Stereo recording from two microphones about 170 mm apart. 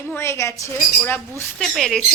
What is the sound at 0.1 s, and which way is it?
A woman's voice, 15° left (ahead or behind).